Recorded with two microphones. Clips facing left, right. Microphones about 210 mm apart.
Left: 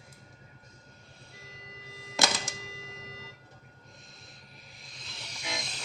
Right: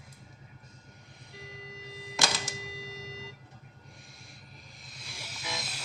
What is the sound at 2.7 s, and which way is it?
Tick-tock, 30° right (ahead or behind).